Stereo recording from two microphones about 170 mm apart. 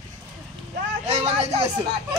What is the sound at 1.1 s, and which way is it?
Speech, 40° right (ahead or behind).